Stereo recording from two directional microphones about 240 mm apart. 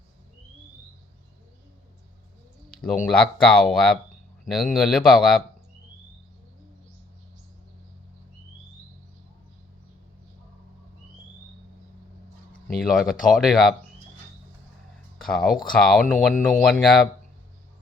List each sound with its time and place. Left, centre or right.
2.6 s speech: centre
12.7 s speech: centre
15.2 s speech: centre